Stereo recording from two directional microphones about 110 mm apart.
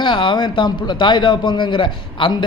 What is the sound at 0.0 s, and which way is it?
Speech, 50° left (ahead or behind).